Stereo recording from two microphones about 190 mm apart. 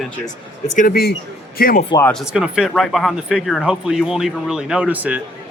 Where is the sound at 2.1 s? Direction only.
Centre (ahead or behind).